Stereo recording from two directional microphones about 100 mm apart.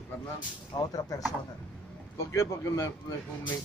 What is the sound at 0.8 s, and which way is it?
Speech, 40° left (ahead or behind).